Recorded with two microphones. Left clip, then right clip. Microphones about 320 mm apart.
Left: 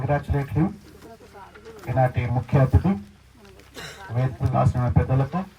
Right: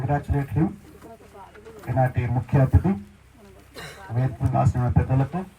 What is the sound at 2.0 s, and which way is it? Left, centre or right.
Speech, left.